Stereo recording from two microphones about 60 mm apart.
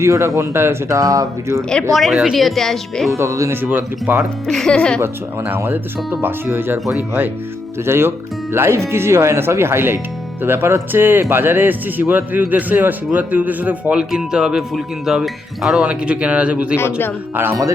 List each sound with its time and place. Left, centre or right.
0.0 s speech: right
0.9 s speech: right
1.9 s speech: centre
3.1 s speech: right
3.5 s speech: right
4.4 s speech: centre
4.9 s speech: right
5.5 s speech: right
7.9 s a man's voice: right
14.0 s speech: centre
15.9 s a man's voice: right
16.7 s a man's voice: left